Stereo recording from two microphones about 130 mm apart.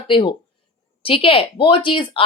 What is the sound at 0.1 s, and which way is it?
A woman's voice, 40° left (ahead or behind).